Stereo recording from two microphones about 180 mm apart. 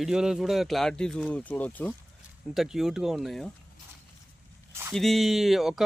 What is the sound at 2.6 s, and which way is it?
Speech, centre (ahead or behind).